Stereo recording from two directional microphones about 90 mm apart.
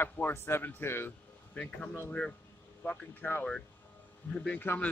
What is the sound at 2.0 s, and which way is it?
A man's voice, 10° left (ahead or behind).